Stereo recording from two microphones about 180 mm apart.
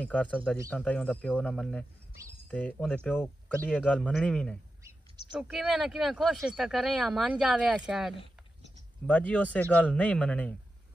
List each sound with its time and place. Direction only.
0.0 s speech: 10° left (ahead or behind)
4.8 s a sound: 25° right (ahead or behind)
5.3 s speech: 5° right (ahead or behind)
9.0 s speech: 5° left (ahead or behind)